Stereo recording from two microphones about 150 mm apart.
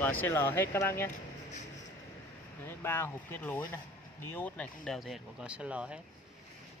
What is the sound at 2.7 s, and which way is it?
Speech, 15° left (ahead or behind).